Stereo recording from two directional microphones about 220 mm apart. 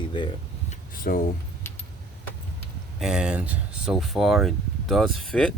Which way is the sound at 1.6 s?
10° left (ahead or behind).